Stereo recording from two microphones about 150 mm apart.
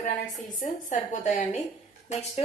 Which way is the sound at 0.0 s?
60° left (ahead or behind).